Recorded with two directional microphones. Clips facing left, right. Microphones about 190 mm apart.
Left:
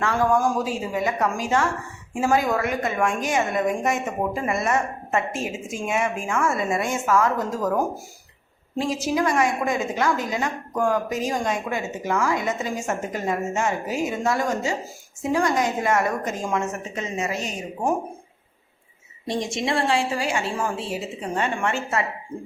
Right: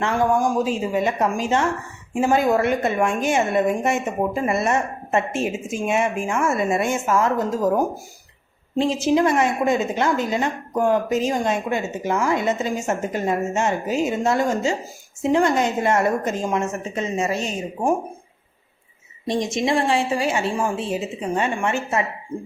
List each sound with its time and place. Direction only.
0.0 s a woman's voice: 20° right (ahead or behind)
8.7 s a woman's voice: 25° right (ahead or behind)
19.3 s a woman's voice: 20° right (ahead or behind)